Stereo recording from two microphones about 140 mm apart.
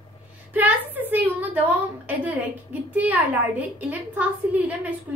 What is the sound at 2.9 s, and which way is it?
A woman's voice, 10° right (ahead or behind).